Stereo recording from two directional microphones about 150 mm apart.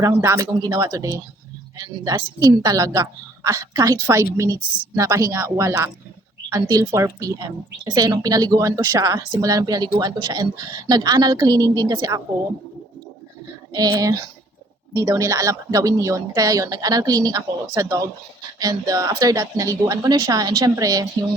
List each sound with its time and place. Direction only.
0.0 s a woman's voice: 20° right (ahead or behind)
13.7 s a woman's voice: 25° right (ahead or behind)